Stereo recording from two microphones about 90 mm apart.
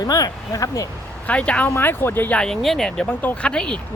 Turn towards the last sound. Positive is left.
turn(degrees=10)  # may be behind; listen again after turning